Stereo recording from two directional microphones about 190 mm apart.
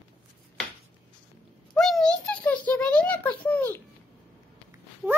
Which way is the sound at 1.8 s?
Centre (ahead or behind).